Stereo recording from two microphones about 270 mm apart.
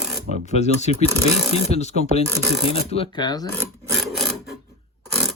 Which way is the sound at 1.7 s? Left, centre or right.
Left.